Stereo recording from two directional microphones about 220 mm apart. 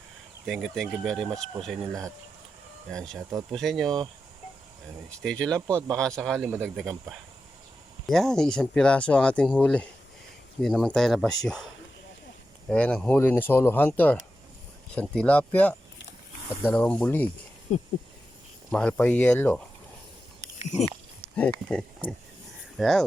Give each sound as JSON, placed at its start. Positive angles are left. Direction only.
{"t": 0.4, "sound": "speech", "side_deg": 0}
{"t": 2.9, "sound": "speech", "side_deg": 0}
{"t": 3.2, "sound": "speech", "side_deg": -15}
{"t": 3.5, "sound": "speech", "side_deg": 0}
{"t": 5.2, "sound": "speech", "side_deg": 5}
{"t": 12.6, "sound": "speech", "side_deg": 5}
{"t": 17.7, "sound": "a sound", "side_deg": 30}
{"t": 18.7, "sound": "speech", "side_deg": 5}
{"t": 21.3, "sound": "speech", "side_deg": 5}